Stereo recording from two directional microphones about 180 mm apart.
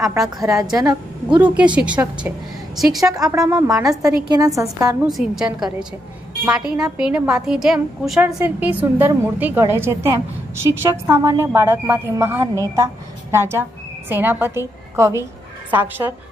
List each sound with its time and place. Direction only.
0.4 s a woman's voice: 20° right (ahead or behind)
1.4 s a woman's voice: 5° right (ahead or behind)
3.1 s a woman's voice: 20° right (ahead or behind)
5.0 s speech: 5° right (ahead or behind)
7.0 s a woman's voice: 5° right (ahead or behind)